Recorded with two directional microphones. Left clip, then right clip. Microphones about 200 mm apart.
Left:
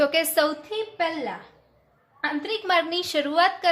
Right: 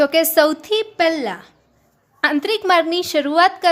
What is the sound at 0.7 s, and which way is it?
A woman's voice, 50° right (ahead or behind).